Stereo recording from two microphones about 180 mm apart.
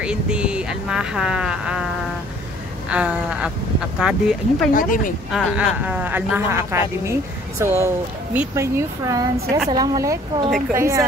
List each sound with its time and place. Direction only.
0.0 s speech: 5° right (ahead or behind)
2.9 s speech: 5° right (ahead or behind)
4.7 s speech: 50° left (ahead or behind)
5.3 s speech: 10° right (ahead or behind)